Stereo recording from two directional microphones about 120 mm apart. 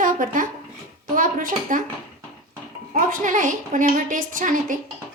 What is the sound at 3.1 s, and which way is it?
A woman's voice, 90° right.